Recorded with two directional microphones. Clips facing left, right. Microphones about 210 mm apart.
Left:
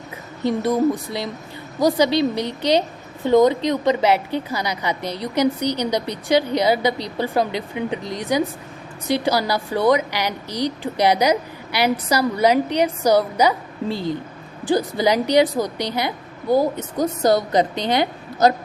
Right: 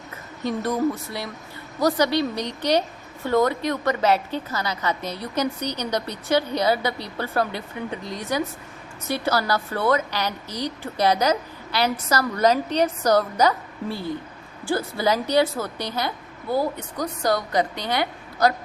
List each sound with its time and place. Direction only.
0.6 s a woman's voice: 15° left (ahead or behind)
2.3 s a woman's voice: 15° right (ahead or behind)
2.6 s a woman's voice: 15° left (ahead or behind)
13.9 s a woman's voice: 10° right (ahead or behind)
14.6 s a woman's voice: 15° left (ahead or behind)